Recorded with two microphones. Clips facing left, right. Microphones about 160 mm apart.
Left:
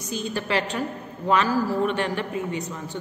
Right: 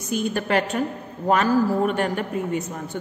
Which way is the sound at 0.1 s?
55° right (ahead or behind).